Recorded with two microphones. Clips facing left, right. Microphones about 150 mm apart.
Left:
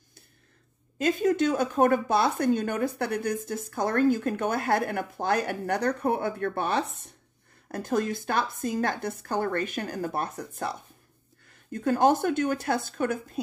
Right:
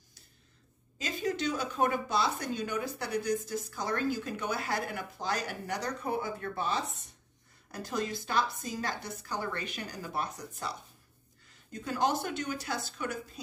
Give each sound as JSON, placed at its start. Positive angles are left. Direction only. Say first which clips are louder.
{"t": 0.9, "sound": "speech", "louder": "left 10 dB", "side_deg": 55}